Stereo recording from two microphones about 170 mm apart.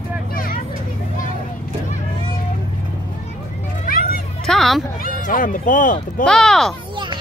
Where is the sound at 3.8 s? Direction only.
55° left (ahead or behind).